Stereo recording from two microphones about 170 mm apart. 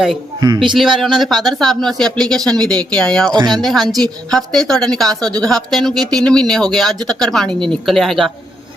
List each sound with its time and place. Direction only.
0.3 s speech: 25° right (ahead or behind)
0.8 s a woman's voice: centre (ahead or behind)
3.3 s speech: 25° right (ahead or behind)
3.6 s a woman's voice: centre (ahead or behind)